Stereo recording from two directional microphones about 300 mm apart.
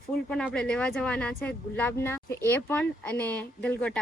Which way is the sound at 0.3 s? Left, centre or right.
Centre.